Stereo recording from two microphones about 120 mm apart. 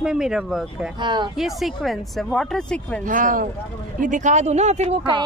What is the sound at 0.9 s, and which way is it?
Speech, 40° right (ahead or behind).